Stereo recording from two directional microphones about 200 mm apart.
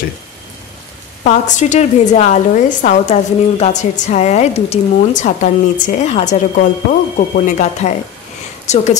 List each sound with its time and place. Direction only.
1.2 s a woman's voice: 35° left (ahead or behind)